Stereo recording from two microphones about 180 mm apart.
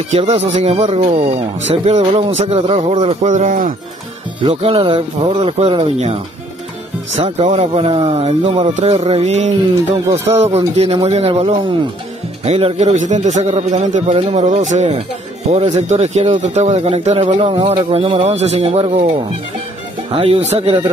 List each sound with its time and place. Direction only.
0.1 s speech: 35° right (ahead or behind)
4.4 s speech: 30° right (ahead or behind)